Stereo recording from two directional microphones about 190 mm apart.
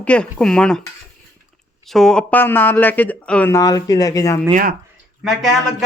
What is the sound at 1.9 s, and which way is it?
Speech, centre (ahead or behind).